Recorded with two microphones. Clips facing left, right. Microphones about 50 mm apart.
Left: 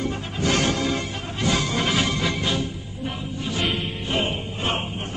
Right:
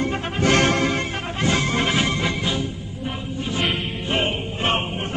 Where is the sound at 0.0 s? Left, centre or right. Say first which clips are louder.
Right 4 dB; right.